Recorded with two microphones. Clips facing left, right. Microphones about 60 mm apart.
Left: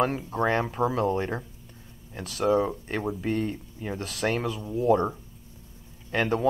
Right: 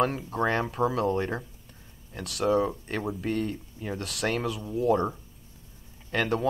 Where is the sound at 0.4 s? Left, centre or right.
Left.